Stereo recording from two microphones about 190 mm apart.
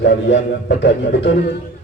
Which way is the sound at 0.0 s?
65° left (ahead or behind).